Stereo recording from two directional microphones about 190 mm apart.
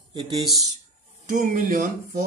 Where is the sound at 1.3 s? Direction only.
45° right (ahead or behind).